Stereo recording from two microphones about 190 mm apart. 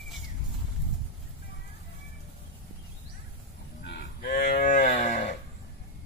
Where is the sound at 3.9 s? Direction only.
55° left (ahead or behind).